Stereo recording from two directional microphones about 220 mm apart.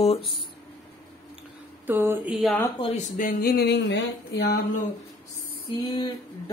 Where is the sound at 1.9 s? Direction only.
10° right (ahead or behind).